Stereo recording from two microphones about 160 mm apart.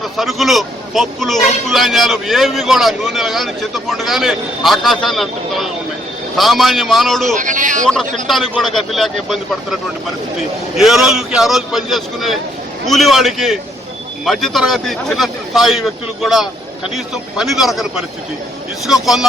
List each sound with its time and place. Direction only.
0.0 s a man's voice: centre (ahead or behind)
7.3 s a man's voice: 55° right (ahead or behind)
8.3 s a man's voice: centre (ahead or behind)
10.8 s a man's voice: centre (ahead or behind)
19.0 s a man's voice: centre (ahead or behind)